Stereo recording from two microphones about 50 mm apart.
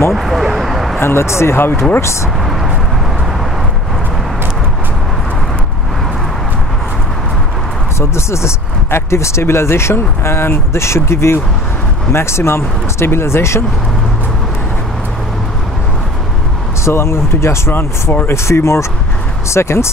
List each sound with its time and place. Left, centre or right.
0.1 s vehicle: centre
0.9 s speech: left
1.6 s speech: left
8.0 s speech: left
16.8 s speech: left